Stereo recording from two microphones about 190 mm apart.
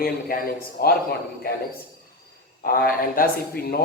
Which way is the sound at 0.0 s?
50° left (ahead or behind).